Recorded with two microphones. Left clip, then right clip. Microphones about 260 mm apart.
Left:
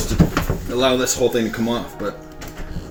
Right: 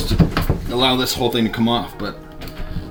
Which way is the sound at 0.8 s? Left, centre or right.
Right.